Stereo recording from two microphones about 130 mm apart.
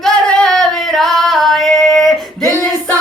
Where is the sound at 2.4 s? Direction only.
25° right (ahead or behind).